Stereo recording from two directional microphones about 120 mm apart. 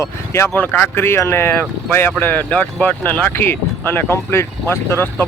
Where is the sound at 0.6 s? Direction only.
15° left (ahead or behind).